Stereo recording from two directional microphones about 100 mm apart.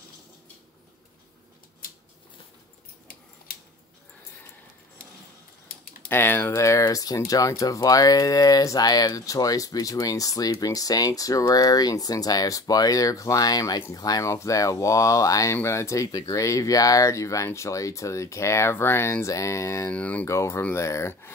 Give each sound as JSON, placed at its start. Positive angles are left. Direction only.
{"t": 6.0, "sound": "speech", "side_deg": 20}
{"t": 19.9, "sound": "speech", "side_deg": 15}
{"t": 20.2, "sound": "speech", "side_deg": 30}